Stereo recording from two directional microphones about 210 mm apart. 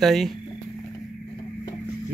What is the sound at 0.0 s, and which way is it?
Speech, centre (ahead or behind).